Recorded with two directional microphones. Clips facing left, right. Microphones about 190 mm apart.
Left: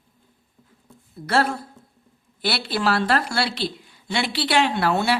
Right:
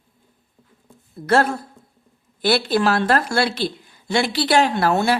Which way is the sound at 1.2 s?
50° right (ahead or behind).